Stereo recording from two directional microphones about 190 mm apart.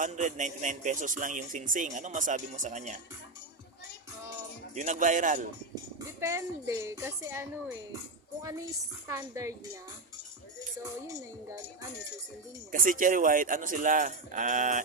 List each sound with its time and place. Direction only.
0.0 s a man's voice: 40° right (ahead or behind)
4.7 s a man's voice: 40° right (ahead or behind)
6.1 s speech: 15° right (ahead or behind)
9.0 s speech: 15° right (ahead or behind)
12.7 s speech: 45° right (ahead or behind)